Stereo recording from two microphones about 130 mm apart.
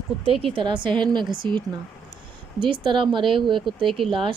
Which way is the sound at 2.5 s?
40° right (ahead or behind).